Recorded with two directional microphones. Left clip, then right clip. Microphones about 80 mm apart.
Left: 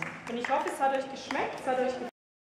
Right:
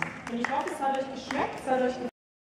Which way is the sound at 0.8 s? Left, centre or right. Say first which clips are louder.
Even; left.